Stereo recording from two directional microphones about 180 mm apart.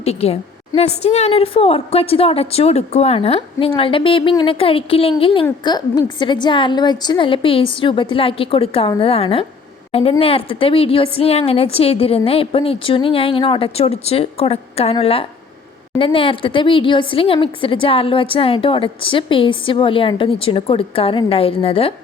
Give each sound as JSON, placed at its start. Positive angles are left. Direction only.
{"t": 0.0, "sound": "a woman's voice", "side_deg": 35}